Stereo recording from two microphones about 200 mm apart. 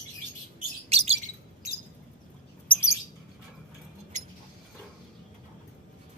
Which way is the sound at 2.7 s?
15° left (ahead or behind).